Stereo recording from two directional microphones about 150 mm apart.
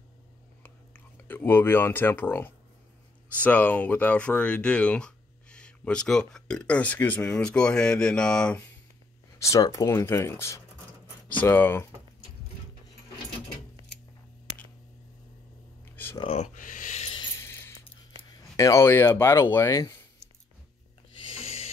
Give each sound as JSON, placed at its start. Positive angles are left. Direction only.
{"t": 0.9, "sound": "speech", "side_deg": 15}
{"t": 9.4, "sound": "speech", "side_deg": 20}
{"t": 16.2, "sound": "speech", "side_deg": 40}
{"t": 16.5, "sound": "a sound", "side_deg": 60}
{"t": 17.4, "sound": "a sound", "side_deg": 15}
{"t": 18.3, "sound": "speech", "side_deg": 20}
{"t": 21.3, "sound": "snort", "side_deg": 40}